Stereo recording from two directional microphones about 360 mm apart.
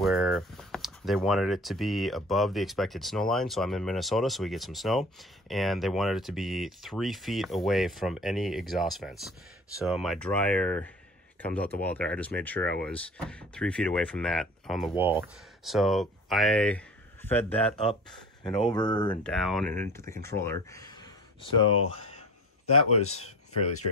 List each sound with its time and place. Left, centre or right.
0.0 s speech: centre
18.7 s speech: centre
19.2 s speech: centre
22.9 s speech: left